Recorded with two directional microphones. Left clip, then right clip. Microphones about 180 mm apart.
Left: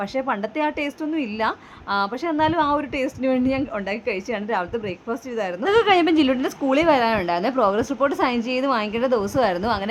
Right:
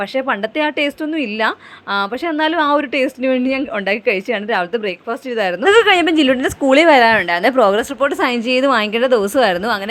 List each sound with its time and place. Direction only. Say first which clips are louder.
0.2 s a woman's voice: right 5 dB; 20° right (ahead or behind)